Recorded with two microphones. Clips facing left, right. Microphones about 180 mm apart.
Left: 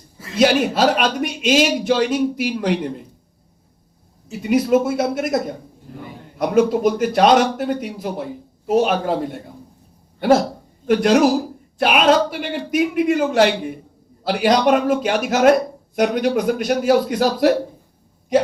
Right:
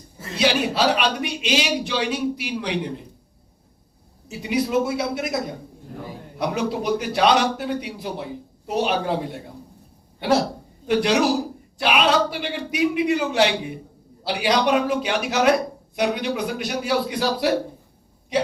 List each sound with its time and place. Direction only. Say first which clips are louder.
0.3 s a man's voice: left 5 dB; 45° left (ahead or behind)
4.3 s a man's voice: left 7 dB; 45° left (ahead or behind)
6.4 s a man's voice: left 8 dB; 45° left (ahead or behind)
10.2 s a man's voice: left 5 dB; 50° left (ahead or behind)